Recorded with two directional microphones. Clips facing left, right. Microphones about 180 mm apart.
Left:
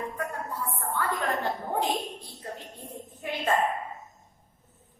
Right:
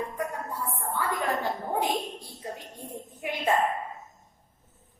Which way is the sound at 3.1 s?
15° right (ahead or behind).